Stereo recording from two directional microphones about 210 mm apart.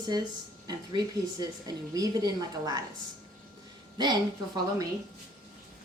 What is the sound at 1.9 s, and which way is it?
Speech, 15° right (ahead or behind).